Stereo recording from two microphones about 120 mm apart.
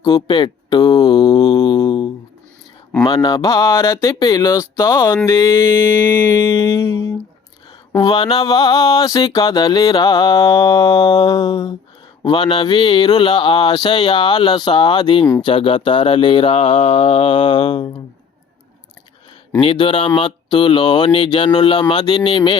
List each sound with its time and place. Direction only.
0.0 s mantra: 40° left (ahead or behind)
7.9 s mantra: 45° left (ahead or behind)
15.4 s speech: 50° left (ahead or behind)
19.5 s speech: 50° left (ahead or behind)